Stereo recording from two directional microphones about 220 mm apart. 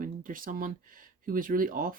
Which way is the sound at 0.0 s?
40° right (ahead or behind).